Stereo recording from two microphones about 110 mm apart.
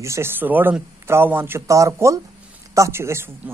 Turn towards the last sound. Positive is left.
turn(degrees=-20)  # may be behind; listen again after turning